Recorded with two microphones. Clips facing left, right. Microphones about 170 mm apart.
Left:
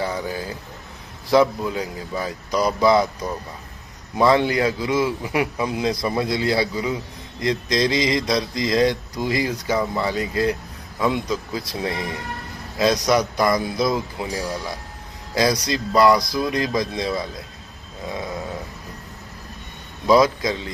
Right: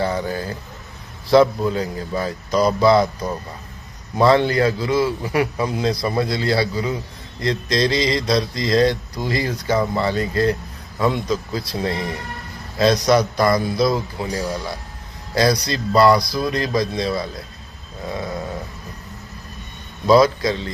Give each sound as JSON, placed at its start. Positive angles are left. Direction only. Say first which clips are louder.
{"t": 0.0, "sound": "a man's voice", "louder": "right 3 dB", "side_deg": 10}
{"t": 4.2, "sound": "a man's voice", "louder": "right 2 dB", "side_deg": 15}
{"t": 20.1, "sound": "a man's voice", "louder": "right 2 dB", "side_deg": 15}